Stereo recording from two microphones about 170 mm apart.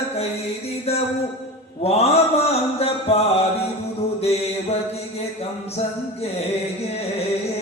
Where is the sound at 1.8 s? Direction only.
35° left (ahead or behind).